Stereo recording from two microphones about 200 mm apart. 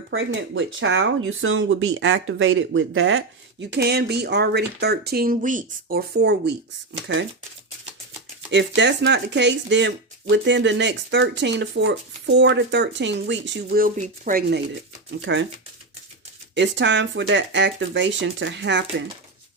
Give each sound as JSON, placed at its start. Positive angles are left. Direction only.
{"t": 0.1, "sound": "speech", "side_deg": -70}
{"t": 8.4, "sound": "speech", "side_deg": -60}
{"t": 13.8, "sound": "speech", "side_deg": -45}
{"t": 15.2, "sound": "speech", "side_deg": -65}
{"t": 16.6, "sound": "speech", "side_deg": -60}